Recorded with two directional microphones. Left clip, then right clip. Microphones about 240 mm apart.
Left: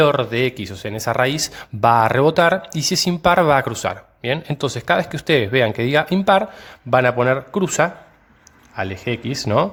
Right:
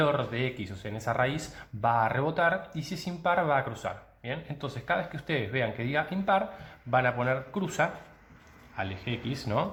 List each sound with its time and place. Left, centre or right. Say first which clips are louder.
0.0 s speech: left 12 dB; left